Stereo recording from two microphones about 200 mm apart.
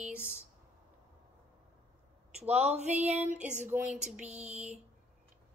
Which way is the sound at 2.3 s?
30° right (ahead or behind).